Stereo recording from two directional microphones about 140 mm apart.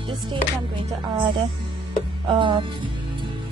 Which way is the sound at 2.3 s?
35° right (ahead or behind).